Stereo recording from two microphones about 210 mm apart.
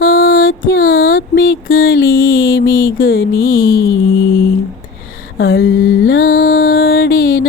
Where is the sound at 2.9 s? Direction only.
45° left (ahead or behind).